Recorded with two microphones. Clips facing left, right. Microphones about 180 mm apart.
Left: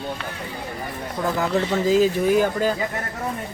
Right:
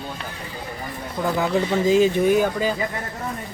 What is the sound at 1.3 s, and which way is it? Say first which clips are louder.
Speech: right 1 dB; 5° right (ahead or behind).